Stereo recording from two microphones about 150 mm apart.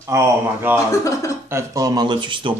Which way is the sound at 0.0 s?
15° right (ahead or behind).